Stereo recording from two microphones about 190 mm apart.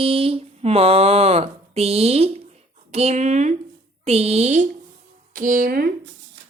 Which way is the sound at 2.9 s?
35° right (ahead or behind).